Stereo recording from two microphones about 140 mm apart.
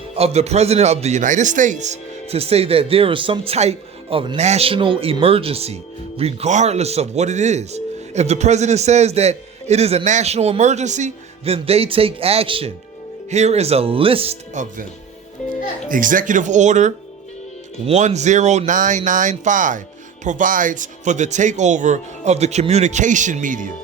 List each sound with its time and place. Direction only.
0.2 s speech: 50° right (ahead or behind)
14.5 s speech: 60° right (ahead or behind)
15.4 s music: 60° left (ahead or behind)
15.9 s speech: 75° right (ahead or behind)